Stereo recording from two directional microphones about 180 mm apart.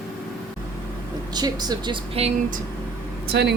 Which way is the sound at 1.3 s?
20° right (ahead or behind).